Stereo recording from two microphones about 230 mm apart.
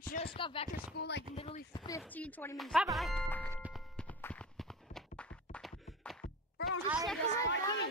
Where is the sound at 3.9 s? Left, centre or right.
Centre.